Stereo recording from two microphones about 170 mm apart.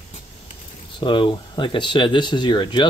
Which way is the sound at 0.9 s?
30° left (ahead or behind).